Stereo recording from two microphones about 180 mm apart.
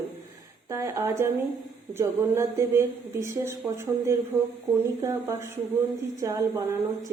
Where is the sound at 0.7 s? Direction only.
15° right (ahead or behind).